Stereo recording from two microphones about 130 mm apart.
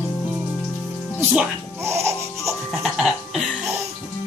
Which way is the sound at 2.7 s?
Centre (ahead or behind).